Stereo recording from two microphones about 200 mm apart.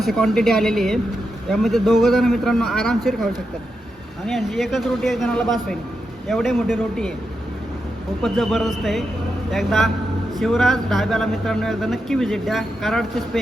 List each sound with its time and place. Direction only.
0.0 s speech: centre (ahead or behind)
4.3 s speech: centre (ahead or behind)
8.2 s speech: centre (ahead or behind)